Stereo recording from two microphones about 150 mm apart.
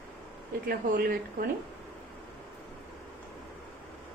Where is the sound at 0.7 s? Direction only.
75° right (ahead or behind).